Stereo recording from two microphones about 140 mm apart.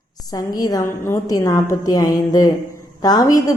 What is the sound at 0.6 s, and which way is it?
Speech, 25° left (ahead or behind).